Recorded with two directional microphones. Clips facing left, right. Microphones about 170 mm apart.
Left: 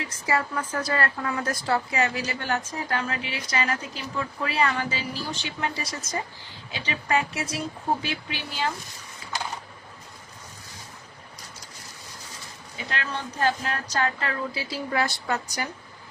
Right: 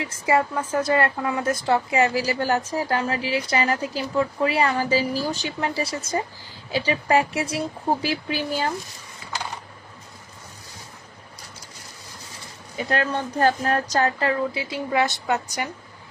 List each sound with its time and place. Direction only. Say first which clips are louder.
0.0 s a woman's voice: right 5 dB; 25° right (ahead or behind); by 8.7 s 40° right (ahead or behind)
12.9 s a woman's voice: right 8 dB; 45° right (ahead or behind); by 15.7 s 20° right (ahead or behind)